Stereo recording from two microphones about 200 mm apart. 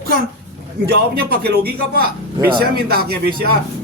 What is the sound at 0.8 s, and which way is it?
A man's voice, 50° right (ahead or behind).